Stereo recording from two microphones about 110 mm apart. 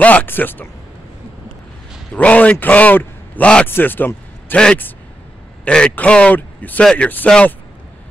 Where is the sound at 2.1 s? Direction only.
10° left (ahead or behind).